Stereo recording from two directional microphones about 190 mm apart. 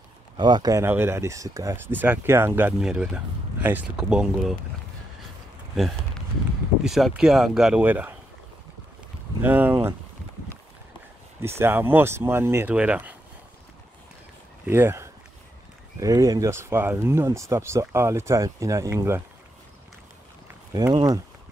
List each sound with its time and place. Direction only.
0.4 s speech: 20° right (ahead or behind); by 4.6 s 5° right (ahead or behind)
6.8 s speech: centre (ahead or behind)
9.4 s speech: 10° right (ahead or behind)
11.4 s speech: 15° right (ahead or behind)
14.7 s speech: 10° right (ahead or behind)
20.7 s speech: 20° right (ahead or behind)